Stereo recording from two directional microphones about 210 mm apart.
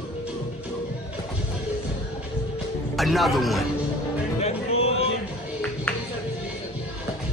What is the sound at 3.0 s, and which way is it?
Speech, centre (ahead or behind).